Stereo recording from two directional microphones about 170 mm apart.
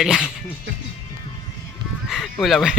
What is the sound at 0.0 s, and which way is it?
Speech, 5° right (ahead or behind).